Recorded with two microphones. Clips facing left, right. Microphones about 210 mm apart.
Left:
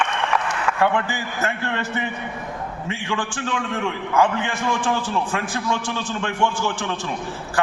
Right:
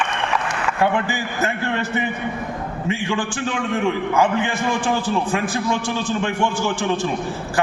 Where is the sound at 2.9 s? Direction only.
10° right (ahead or behind).